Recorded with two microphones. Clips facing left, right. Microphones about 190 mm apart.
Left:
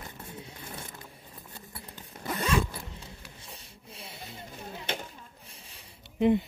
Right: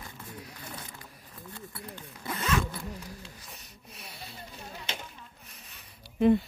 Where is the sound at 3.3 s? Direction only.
30° left (ahead or behind).